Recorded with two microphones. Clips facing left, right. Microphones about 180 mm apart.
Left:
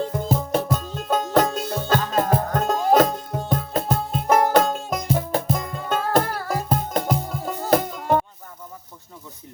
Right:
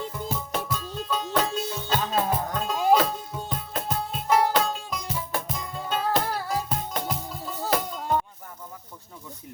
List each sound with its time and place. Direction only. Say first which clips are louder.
0.0 s music: left 8 dB; 55° left (ahead or behind)